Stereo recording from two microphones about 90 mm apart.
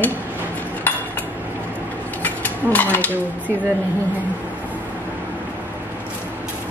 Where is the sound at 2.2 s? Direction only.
20° left (ahead or behind).